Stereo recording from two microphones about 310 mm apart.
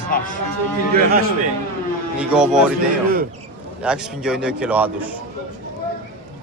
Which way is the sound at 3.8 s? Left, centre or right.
Centre.